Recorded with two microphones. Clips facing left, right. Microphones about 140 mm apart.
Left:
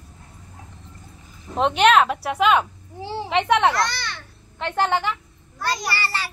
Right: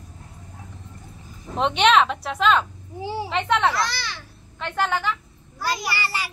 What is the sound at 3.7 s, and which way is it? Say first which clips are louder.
Speech: left 2 dB; centre (ahead or behind).